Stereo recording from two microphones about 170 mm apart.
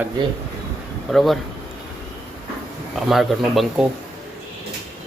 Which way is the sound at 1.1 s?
Centre (ahead or behind).